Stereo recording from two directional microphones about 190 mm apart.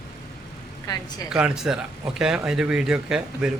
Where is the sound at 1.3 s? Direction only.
5° right (ahead or behind).